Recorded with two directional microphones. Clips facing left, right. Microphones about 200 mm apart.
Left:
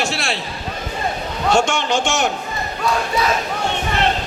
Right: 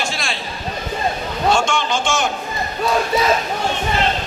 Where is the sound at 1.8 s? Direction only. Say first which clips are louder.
Left 1 dB; 65° left (ahead or behind).